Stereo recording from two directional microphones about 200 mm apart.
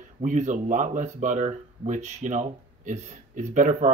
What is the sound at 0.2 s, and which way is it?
Speech, 40° right (ahead or behind).